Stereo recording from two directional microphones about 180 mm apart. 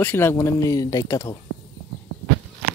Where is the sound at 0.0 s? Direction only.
10° left (ahead or behind).